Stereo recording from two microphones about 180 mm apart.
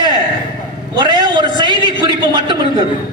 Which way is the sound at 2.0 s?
25° right (ahead or behind).